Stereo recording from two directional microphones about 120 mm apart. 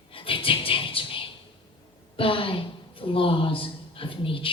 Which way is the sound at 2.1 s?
50° left (ahead or behind).